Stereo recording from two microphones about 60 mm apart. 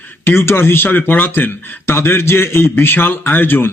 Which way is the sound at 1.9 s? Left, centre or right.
Left.